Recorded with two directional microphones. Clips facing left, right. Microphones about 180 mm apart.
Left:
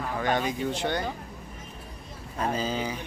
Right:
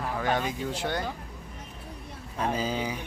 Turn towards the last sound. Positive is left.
turn(degrees=-10)  # may be behind; listen again after turning